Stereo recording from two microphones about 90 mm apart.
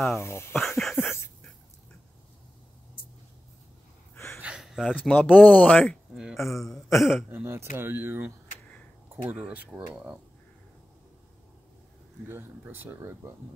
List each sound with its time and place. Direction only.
0.2 s speech: 30° left (ahead or behind)
0.6 s a sound: centre (ahead or behind)
0.9 s a sound: 25° left (ahead or behind)
4.1 s gasp: 30° left (ahead or behind)
4.4 s a sound: 10° right (ahead or behind)
5.0 s speech: 15° left (ahead or behind)
6.1 s a man's voice: centre (ahead or behind)
7.4 s speech: 25° right (ahead or behind)
12.3 s speech: 25° right (ahead or behind)